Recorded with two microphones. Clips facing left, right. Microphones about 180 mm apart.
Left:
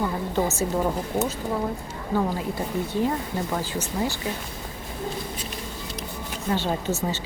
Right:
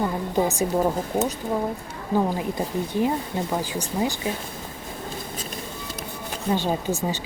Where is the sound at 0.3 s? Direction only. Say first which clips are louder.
Right 3 dB; 15° right (ahead or behind).